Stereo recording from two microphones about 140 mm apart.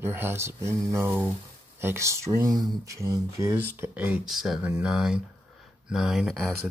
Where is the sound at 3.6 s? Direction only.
15° right (ahead or behind).